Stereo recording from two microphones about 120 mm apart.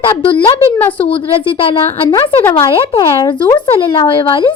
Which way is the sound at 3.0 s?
35° left (ahead or behind).